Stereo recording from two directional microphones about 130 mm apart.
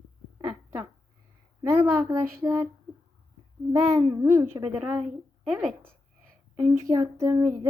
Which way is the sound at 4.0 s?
30° right (ahead or behind).